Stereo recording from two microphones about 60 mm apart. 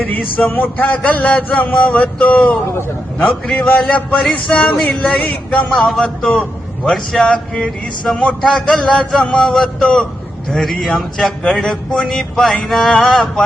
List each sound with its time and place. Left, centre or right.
0.1 s a man's voice: left
5.7 s speech: centre
6.0 s a man's voice: centre